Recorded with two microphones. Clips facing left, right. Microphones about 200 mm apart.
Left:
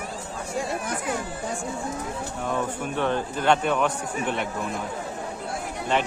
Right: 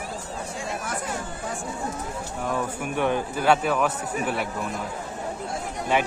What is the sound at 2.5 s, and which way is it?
A man's voice, 10° right (ahead or behind).